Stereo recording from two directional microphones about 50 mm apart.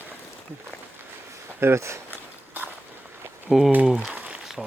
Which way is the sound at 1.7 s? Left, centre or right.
Right.